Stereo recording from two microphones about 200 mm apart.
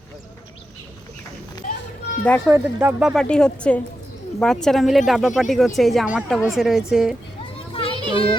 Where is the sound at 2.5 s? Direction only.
10° right (ahead or behind).